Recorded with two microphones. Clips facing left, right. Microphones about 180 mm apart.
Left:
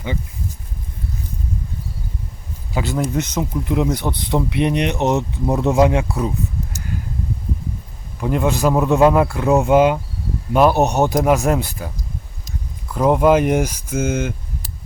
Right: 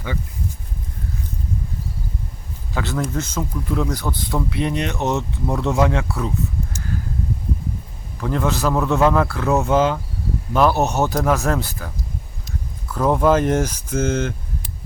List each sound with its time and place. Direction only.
2.7 s speech: 15° left (ahead or behind)
8.2 s speech: 15° left (ahead or behind)
12.9 s speech: 15° left (ahead or behind)